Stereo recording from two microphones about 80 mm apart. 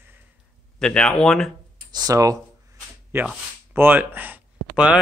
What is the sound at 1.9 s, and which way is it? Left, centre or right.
Speech, right.